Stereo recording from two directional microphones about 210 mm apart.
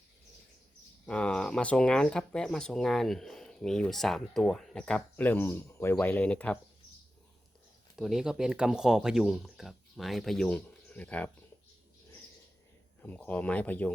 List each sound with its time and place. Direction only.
1.0 s speech: 5° left (ahead or behind)
7.9 s speech: centre (ahead or behind)
13.0 s speech: 5° left (ahead or behind)